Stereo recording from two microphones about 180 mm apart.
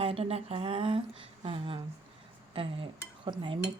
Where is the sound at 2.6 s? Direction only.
30° right (ahead or behind).